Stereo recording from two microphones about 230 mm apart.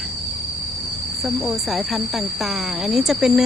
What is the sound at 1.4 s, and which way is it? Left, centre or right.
Speech, centre.